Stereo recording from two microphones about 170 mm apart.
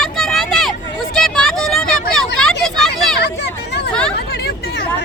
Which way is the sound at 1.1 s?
5° left (ahead or behind).